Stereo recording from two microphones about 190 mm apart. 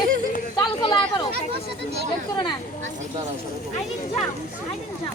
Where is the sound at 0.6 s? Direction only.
25° left (ahead or behind).